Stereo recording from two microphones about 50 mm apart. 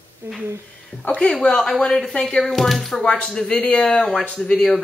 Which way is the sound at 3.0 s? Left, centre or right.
Centre.